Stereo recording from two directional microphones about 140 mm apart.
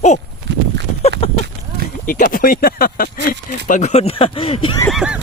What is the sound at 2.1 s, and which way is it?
Speech, 90° left.